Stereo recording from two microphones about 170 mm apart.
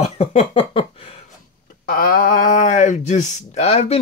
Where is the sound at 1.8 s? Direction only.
60° left (ahead or behind).